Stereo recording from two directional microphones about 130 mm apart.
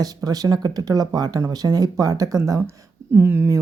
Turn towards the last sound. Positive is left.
turn(degrees=-20)  # may be behind; listen again after turning